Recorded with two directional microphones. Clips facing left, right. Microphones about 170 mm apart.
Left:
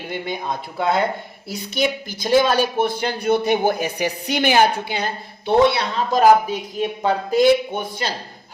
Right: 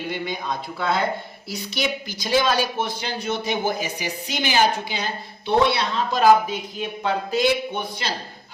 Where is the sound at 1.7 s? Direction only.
50° left (ahead or behind).